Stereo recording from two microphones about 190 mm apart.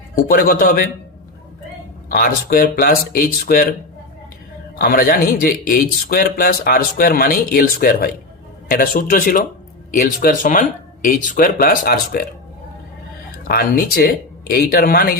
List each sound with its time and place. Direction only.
0.3 s a man's voice: 50° left (ahead or behind)
2.0 s a man's voice: 50° left (ahead or behind)
4.8 s a man's voice: 50° left (ahead or behind)
13.4 s a man's voice: 50° left (ahead or behind)